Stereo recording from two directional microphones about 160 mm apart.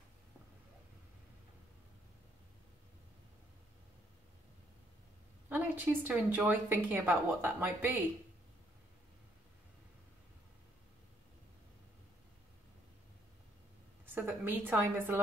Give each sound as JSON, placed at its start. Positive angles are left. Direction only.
{"t": 5.5, "sound": "speech", "side_deg": -10}
{"t": 14.0, "sound": "speech", "side_deg": -15}